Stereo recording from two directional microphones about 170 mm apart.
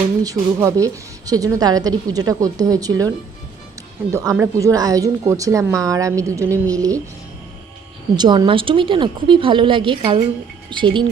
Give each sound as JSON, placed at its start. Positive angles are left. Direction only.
{"t": 0.2, "sound": "a woman's voice", "side_deg": -20}
{"t": 4.1, "sound": "a woman's voice", "side_deg": -20}
{"t": 8.1, "sound": "a woman's voice", "side_deg": -25}